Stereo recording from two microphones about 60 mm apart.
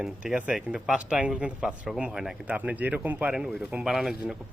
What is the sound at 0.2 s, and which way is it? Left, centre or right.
Speech, centre.